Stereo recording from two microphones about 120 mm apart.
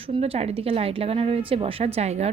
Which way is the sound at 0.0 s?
50° right (ahead or behind).